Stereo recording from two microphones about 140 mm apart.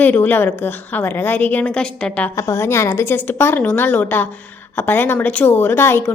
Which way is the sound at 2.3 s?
20° left (ahead or behind).